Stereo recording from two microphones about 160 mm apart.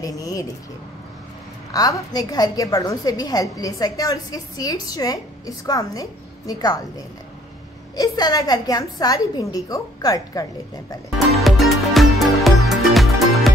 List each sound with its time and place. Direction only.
0.0 s a woman's voice: 20° left (ahead or behind)
1.7 s a woman's voice: 20° left (ahead or behind)
7.9 s a woman's voice: 25° left (ahead or behind)
11.1 s music: centre (ahead or behind)